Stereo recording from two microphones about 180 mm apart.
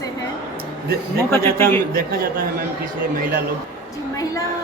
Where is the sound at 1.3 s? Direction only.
15° left (ahead or behind).